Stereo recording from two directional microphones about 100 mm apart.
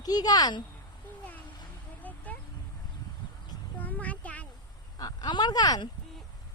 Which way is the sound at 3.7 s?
15° left (ahead or behind).